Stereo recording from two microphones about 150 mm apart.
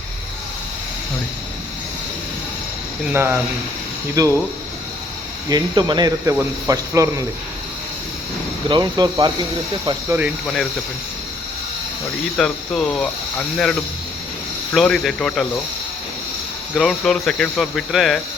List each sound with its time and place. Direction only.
3.1 s speech: 15° right (ahead or behind)
5.5 s speech: 30° right (ahead or behind)
8.7 s speech: 30° right (ahead or behind)
10.1 s speech: 10° right (ahead or behind)
10.4 s speech: centre (ahead or behind)
12.4 s speech: 5° left (ahead or behind)
14.7 s speech: 5° left (ahead or behind)
16.7 s speech: centre (ahead or behind)